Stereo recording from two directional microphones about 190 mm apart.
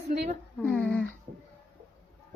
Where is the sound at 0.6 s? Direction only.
5° left (ahead or behind).